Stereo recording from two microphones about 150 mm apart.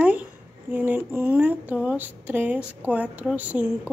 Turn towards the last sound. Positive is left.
turn(degrees=-10)  # may be behind; listen again after turning